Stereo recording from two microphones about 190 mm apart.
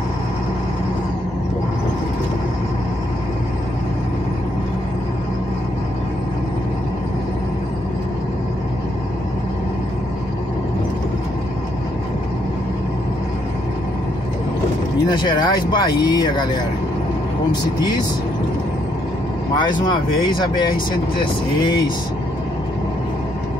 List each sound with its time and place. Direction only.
15.2 s speech: 25° left (ahead or behind)
17.5 s speech: 20° left (ahead or behind)
19.6 s speech: 25° left (ahead or behind)